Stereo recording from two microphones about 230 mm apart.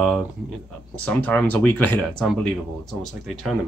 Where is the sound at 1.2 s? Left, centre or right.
Centre.